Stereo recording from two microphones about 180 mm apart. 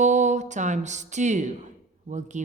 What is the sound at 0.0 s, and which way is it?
Speech, 40° right (ahead or behind).